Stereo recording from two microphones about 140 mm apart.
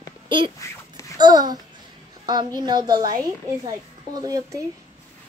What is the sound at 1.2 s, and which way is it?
A child's voice, 30° right (ahead or behind).